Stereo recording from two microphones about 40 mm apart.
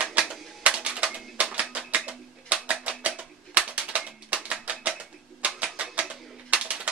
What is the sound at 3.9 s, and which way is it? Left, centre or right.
Music, right.